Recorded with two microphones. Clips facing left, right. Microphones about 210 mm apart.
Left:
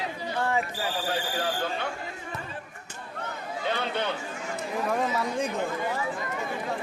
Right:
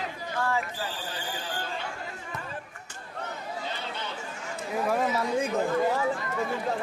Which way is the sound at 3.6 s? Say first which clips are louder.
Left 7 dB; 65° left (ahead or behind).